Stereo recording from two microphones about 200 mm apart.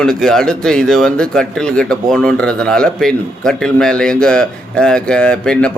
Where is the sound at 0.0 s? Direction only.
5° left (ahead or behind).